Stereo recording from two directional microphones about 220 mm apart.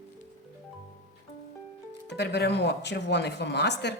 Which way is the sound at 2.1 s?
50° left (ahead or behind).